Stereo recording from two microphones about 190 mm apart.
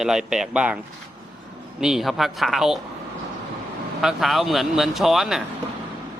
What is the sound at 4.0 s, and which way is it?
Speech, centre (ahead or behind).